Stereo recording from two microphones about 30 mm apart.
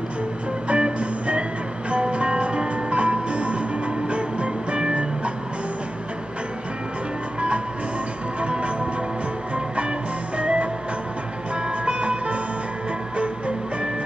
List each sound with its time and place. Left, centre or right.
0.7 s music: right
8.4 s music: right
9.8 s music: right
11.8 s music: right